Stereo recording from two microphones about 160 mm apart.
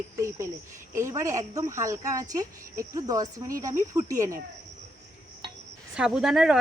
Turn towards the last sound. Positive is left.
turn(degrees=-5)  # may be behind; listen again after turning